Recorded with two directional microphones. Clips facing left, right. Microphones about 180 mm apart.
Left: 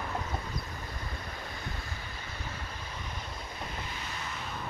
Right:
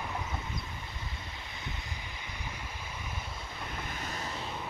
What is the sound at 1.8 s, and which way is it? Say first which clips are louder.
Vehicle: left 1 dB; 15° right (ahead or behind).